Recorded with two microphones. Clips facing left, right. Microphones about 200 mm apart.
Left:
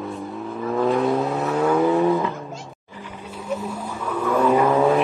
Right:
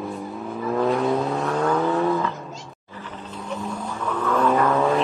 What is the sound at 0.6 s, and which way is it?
Vehicle, centre (ahead or behind).